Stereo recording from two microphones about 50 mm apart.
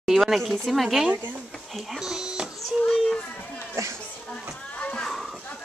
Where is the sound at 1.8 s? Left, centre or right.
Centre.